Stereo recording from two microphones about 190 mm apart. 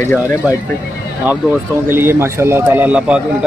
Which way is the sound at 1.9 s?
10° right (ahead or behind).